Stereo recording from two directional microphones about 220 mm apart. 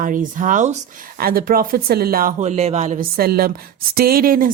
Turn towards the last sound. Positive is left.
turn(degrees=-40)  # may be behind; listen again after turning